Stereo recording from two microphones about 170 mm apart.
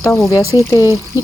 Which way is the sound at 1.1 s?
15° right (ahead or behind).